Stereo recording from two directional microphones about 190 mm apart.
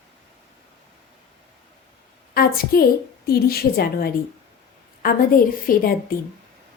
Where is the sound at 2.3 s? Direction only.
55° left (ahead or behind).